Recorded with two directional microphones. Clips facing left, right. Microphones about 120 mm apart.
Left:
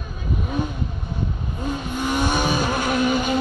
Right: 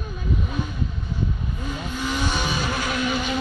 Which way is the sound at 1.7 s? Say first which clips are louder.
Left 4 dB; 50° left (ahead or behind).